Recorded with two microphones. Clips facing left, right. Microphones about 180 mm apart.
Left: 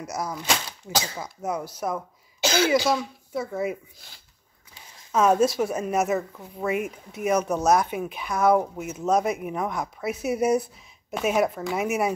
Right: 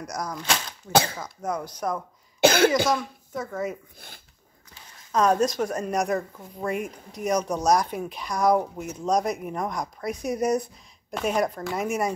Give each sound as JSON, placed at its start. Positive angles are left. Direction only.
{"t": 0.0, "sound": "a child's voice", "side_deg": 5}
{"t": 2.4, "sound": "cough", "side_deg": -55}
{"t": 2.9, "sound": "a child's voice", "side_deg": 10}
{"t": 5.1, "sound": "speech", "side_deg": 5}